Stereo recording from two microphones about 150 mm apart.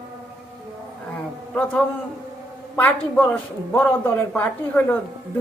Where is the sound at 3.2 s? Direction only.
10° left (ahead or behind).